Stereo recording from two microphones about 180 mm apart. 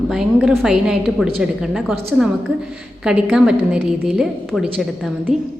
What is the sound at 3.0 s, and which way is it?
A woman's voice, 5° right (ahead or behind).